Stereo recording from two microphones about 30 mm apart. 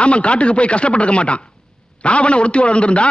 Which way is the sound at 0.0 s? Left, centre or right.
Left.